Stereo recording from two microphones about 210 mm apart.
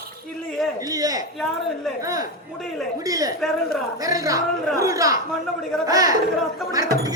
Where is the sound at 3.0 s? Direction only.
15° right (ahead or behind).